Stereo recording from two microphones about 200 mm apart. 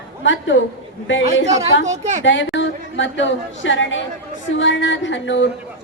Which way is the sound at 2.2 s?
70° left (ahead or behind).